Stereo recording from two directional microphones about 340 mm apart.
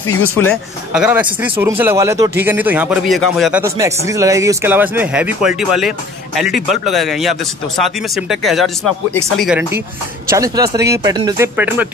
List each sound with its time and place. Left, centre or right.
0.0 s speech: left
0.9 s speech: centre